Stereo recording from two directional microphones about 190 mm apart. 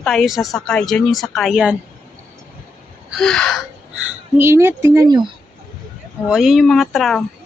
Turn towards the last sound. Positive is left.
turn(degrees=0)  # may be behind; listen again after turning